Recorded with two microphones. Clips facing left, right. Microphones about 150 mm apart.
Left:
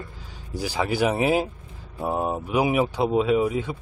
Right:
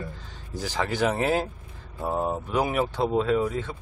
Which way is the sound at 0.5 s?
10° left (ahead or behind).